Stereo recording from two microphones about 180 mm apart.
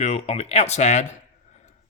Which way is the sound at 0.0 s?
35° left (ahead or behind).